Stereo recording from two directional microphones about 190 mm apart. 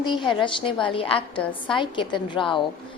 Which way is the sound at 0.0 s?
25° left (ahead or behind).